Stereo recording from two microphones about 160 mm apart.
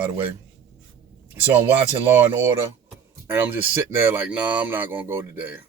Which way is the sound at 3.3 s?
10° right (ahead or behind).